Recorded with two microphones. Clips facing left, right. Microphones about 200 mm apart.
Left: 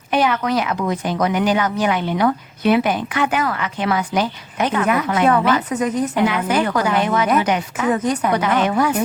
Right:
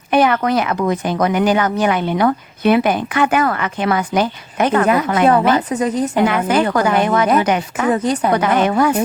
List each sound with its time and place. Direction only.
0.1 s speech: 55° right (ahead or behind)
5.2 s a woman's voice: 35° right (ahead or behind)
6.2 s speech: 50° right (ahead or behind)
7.9 s a woman's voice: 30° right (ahead or behind)
8.3 s speech: 50° right (ahead or behind)